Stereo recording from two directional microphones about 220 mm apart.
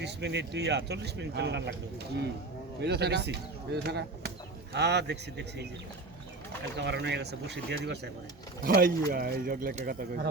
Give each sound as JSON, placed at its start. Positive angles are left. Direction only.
{"t": 0.0, "sound": "speech", "side_deg": -50}
{"t": 2.8, "sound": "speech", "side_deg": -50}
{"t": 6.7, "sound": "speech", "side_deg": -50}